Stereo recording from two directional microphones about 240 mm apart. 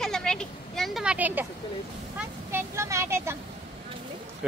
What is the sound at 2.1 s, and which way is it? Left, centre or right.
Speech, centre.